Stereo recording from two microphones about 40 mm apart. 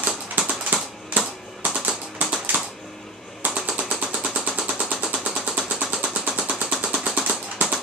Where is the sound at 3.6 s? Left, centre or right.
Right.